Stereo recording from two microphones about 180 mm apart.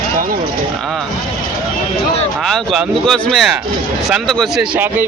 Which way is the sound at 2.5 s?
Centre (ahead or behind).